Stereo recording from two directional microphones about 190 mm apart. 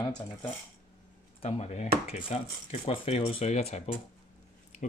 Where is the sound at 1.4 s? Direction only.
35° left (ahead or behind).